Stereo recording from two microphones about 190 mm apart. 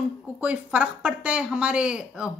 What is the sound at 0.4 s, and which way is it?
Speech, 5° right (ahead or behind).